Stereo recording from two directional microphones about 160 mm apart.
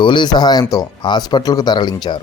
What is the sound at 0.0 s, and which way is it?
Speech, 30° left (ahead or behind).